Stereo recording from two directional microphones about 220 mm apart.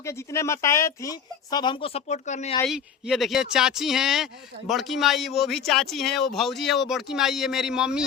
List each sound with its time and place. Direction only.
0.0 s speech: 15° left (ahead or behind); by 2.6 s 30° left (ahead or behind)
2.6 s speech: centre (ahead or behind)